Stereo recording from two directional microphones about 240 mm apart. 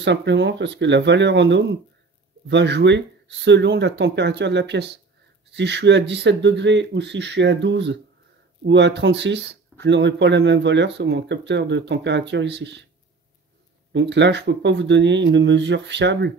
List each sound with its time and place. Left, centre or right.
0.0 s speech: right
13.9 s speech: right